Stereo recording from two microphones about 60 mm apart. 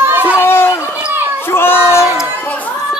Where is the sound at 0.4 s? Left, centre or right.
Left.